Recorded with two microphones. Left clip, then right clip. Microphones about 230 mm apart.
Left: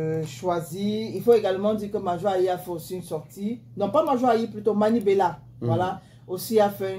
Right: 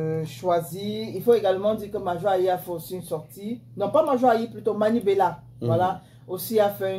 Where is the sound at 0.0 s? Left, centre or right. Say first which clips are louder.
Even; left.